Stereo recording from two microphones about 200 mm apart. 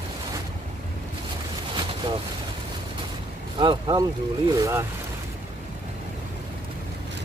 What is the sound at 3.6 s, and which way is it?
Speech, 20° right (ahead or behind).